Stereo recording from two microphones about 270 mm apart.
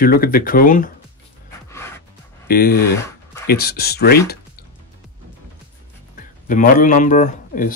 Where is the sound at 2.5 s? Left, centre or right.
Left.